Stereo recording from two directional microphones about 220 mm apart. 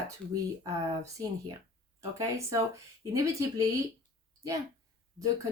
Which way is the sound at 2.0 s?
15° right (ahead or behind).